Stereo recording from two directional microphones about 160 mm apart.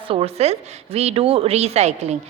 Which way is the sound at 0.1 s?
40° right (ahead or behind).